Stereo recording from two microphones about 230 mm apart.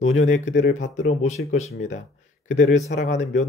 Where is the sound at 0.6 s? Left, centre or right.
Left.